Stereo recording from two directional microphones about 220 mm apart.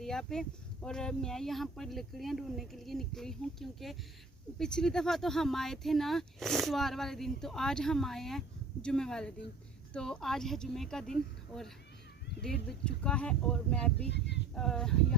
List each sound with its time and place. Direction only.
0.0 s speech: centre (ahead or behind)
14.1 s speech: 50° left (ahead or behind)
14.5 s speech: centre (ahead or behind)